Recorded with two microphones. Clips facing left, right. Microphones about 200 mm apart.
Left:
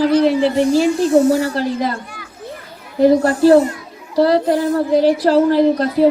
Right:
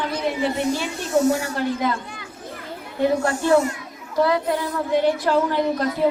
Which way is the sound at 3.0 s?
35° left (ahead or behind).